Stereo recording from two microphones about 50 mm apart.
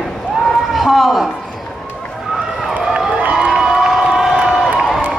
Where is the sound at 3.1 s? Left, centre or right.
Right.